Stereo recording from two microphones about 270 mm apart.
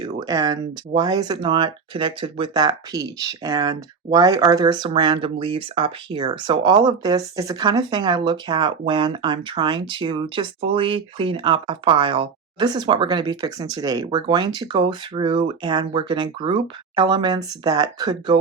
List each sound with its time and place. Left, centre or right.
0.0 s speech: centre